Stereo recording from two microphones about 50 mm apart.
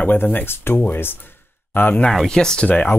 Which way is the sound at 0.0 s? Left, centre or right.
Left.